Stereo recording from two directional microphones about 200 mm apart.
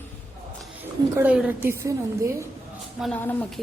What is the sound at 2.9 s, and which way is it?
Speech, centre (ahead or behind).